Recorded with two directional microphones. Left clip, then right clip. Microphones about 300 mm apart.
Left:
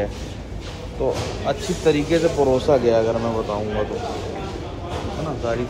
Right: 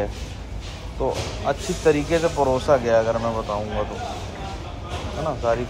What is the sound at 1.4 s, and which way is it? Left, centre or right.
Speech, right.